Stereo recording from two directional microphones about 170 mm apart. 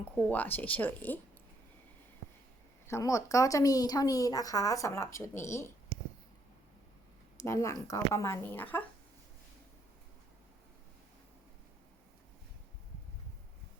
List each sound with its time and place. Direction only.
0.2 s speech: 10° left (ahead or behind)
2.8 s speech: 15° left (ahead or behind)
7.3 s speech: 15° left (ahead or behind)